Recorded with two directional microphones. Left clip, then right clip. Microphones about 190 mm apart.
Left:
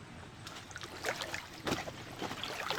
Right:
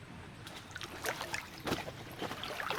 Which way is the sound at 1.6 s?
10° left (ahead or behind).